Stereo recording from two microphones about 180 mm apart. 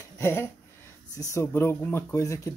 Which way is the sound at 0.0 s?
15° left (ahead or behind).